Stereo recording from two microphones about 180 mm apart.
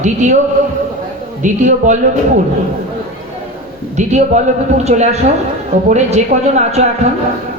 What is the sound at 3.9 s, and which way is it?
A man's voice, 40° right (ahead or behind).